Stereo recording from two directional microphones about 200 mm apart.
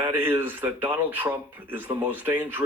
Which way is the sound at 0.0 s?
10° right (ahead or behind).